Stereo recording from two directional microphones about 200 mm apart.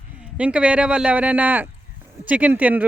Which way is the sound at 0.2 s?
5° right (ahead or behind).